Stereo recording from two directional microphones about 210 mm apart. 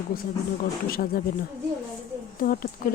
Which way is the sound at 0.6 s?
45° left (ahead or behind).